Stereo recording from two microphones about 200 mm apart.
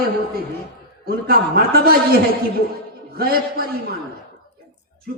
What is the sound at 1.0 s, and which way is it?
Speech, 50° right (ahead or behind).